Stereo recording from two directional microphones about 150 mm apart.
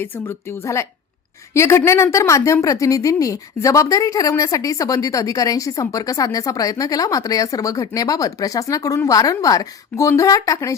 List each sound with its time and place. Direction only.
0.0 s a woman's voice: 15° left (ahead or behind)